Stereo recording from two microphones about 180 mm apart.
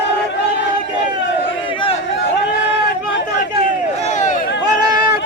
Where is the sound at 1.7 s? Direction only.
30° left (ahead or behind).